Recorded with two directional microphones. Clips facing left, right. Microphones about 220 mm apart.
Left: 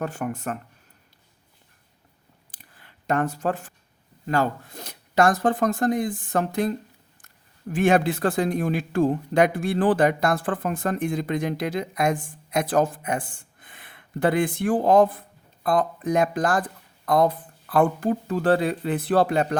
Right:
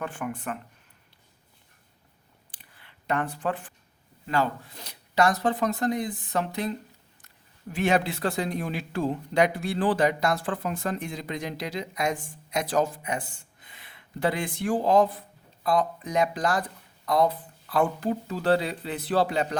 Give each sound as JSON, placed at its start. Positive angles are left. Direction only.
{"t": 0.0, "sound": "speech", "side_deg": 40}
{"t": 2.5, "sound": "clicking", "side_deg": 45}
{"t": 4.3, "sound": "speech", "side_deg": 45}